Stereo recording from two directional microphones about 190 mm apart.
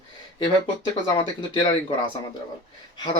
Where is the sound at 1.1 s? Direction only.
25° left (ahead or behind).